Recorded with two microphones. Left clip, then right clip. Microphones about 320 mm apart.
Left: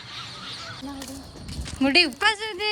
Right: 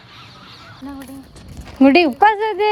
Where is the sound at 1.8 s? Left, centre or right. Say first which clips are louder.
Right 7 dB; centre.